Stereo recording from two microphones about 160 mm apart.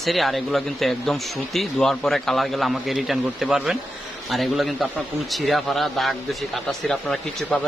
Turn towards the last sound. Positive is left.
turn(degrees=5)  # may be behind; listen again after turning